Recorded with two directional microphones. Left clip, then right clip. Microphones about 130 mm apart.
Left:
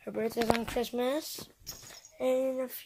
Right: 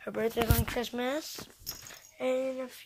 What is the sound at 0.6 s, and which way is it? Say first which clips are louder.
Speech: left 2 dB; 15° left (ahead or behind).